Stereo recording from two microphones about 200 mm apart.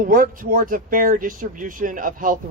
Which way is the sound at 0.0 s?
45° right (ahead or behind).